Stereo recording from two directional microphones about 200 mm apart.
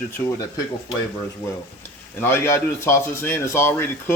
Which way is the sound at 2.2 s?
10° left (ahead or behind).